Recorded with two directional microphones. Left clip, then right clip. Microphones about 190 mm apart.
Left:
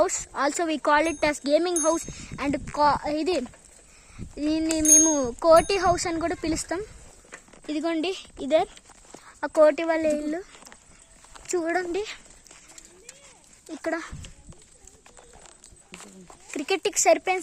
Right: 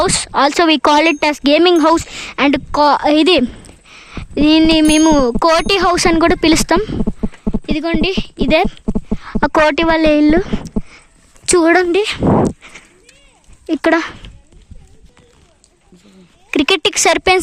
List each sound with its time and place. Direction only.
0.0 s a child's voice: 30° right (ahead or behind)
0.6 s speech: 50° right (ahead or behind)
0.9 s a child's voice: 30° right (ahead or behind)
7.7 s a woman's voice: 10° right (ahead or behind)
9.2 s a child's voice: 30° right (ahead or behind)
13.7 s a child's voice: 30° right (ahead or behind)
16.5 s a child's voice: 40° right (ahead or behind)